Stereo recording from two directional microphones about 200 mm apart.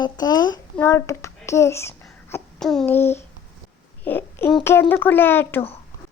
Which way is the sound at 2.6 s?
Centre (ahead or behind).